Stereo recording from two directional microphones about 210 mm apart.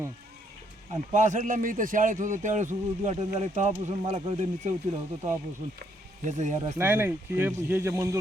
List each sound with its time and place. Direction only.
1.1 s a man's voice: 35° right (ahead or behind)
6.7 s speech: 10° right (ahead or behind)